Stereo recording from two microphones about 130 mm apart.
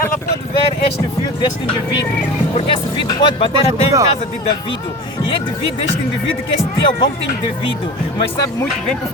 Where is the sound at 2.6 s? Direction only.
35° left (ahead or behind).